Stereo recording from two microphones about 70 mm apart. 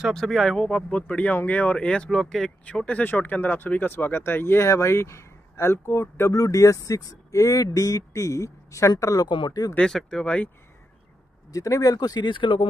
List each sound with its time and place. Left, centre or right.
0.1 s speech: centre
0.8 s speech: centre
2.0 s speech: centre; by 6.3 s left
6.3 s speech: left
9.0 s speech: left
9.8 s speech: centre
11.5 s speech: left